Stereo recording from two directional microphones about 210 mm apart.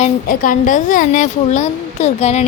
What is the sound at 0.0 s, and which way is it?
Speech, 40° left (ahead or behind).